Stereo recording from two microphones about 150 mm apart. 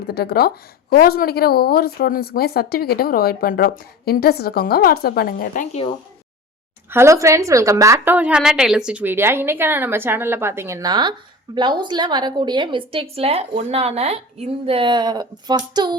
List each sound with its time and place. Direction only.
0.1 s a woman's voice: 90° left
6.9 s a woman's voice: 20° right (ahead or behind)